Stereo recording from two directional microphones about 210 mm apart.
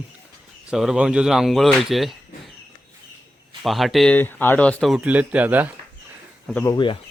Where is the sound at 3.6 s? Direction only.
Centre (ahead or behind).